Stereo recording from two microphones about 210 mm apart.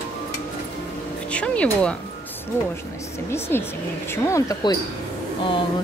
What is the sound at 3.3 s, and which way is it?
Speech, 10° left (ahead or behind).